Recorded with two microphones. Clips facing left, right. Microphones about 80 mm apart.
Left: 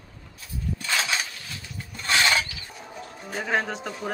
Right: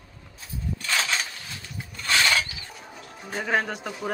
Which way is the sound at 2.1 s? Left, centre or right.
Left.